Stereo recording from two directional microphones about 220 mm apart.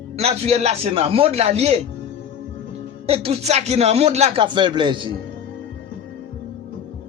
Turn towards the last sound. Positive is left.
turn(degrees=-20)  # may be behind; listen again after turning